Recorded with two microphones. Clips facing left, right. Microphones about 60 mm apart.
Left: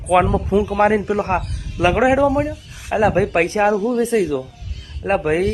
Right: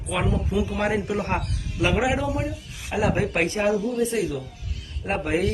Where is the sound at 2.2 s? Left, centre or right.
Left.